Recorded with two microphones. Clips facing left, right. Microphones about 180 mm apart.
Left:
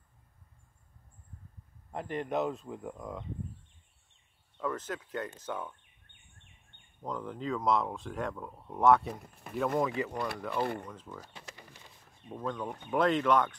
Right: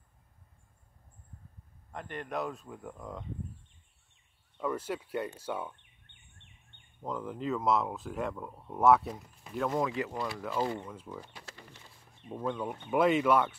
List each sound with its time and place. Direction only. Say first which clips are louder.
2.1 s speech: left 4 dB; 25° left (ahead or behind)
4.6 s speech: right 2 dB; 10° right (ahead or behind)
7.0 s speech: right 1 dB; 5° right (ahead or behind)
9.1 s speech: left 1 dB; 55° left (ahead or behind)
9.6 s speech: left 1 dB; centre (ahead or behind)
10.1 s speech: left 1 dB; 60° left (ahead or behind)
10.9 s speech: right 2 dB; 10° right (ahead or behind)
11.3 s a sound: even; 15° left (ahead or behind)
12.3 s speech: right 2 dB; 10° right (ahead or behind)